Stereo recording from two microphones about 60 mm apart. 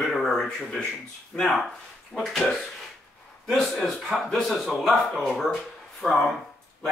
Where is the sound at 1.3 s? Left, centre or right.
Left.